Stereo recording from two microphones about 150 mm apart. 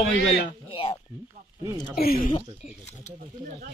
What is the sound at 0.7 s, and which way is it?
Dishes, 40° left (ahead or behind).